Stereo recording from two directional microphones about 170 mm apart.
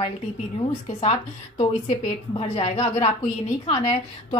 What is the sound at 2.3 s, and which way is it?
A woman's voice, 35° left (ahead or behind).